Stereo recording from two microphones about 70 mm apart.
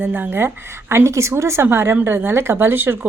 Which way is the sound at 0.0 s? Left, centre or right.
Right.